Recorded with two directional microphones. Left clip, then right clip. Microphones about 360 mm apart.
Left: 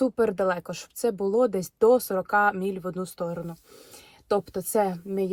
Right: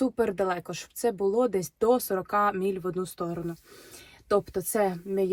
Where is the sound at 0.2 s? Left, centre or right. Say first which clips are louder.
Left 3 dB; centre.